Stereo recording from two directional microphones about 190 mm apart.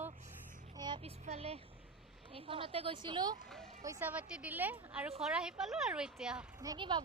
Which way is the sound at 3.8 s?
10° right (ahead or behind).